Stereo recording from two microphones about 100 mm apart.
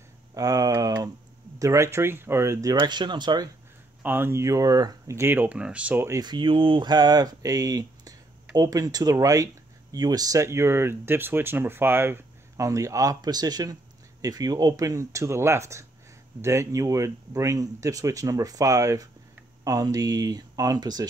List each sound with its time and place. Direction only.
0.3 s speech: 35° right (ahead or behind)
2.8 s speech: 50° right (ahead or behind)
4.0 s speech: 20° right (ahead or behind)
6.2 s speech: 55° right (ahead or behind)